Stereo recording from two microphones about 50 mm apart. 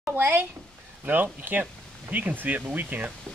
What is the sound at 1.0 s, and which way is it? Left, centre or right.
Speech, right.